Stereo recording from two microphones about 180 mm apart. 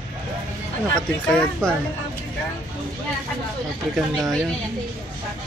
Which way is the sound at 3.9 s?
Centre (ahead or behind).